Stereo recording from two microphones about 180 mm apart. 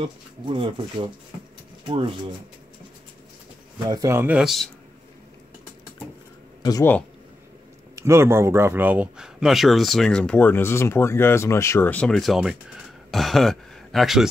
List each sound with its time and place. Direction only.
0.0 s speech: 25° right (ahead or behind)
3.8 s speech: 20° right (ahead or behind); by 4.6 s centre (ahead or behind)
6.6 s speech: 15° left (ahead or behind)
7.9 s speech: 15° right (ahead or behind)